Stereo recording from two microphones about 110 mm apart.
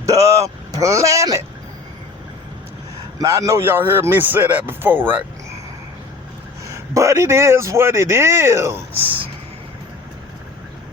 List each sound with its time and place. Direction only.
0.0 s speech: 30° right (ahead or behind)
3.2 s a man's voice: 30° right (ahead or behind)
6.7 s a man's voice: 25° right (ahead or behind)